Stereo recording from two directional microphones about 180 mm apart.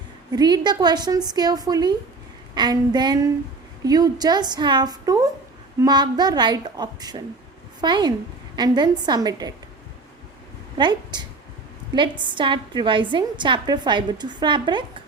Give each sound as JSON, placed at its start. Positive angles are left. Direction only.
{"t": 0.3, "sound": "a woman's voice", "side_deg": -20}
{"t": 10.8, "sound": "a woman's voice", "side_deg": -25}